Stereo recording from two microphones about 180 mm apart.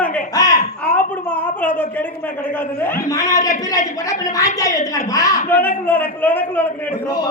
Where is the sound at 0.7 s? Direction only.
10° left (ahead or behind).